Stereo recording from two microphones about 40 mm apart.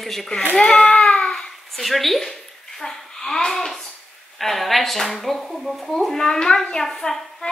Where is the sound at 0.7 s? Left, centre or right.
Left.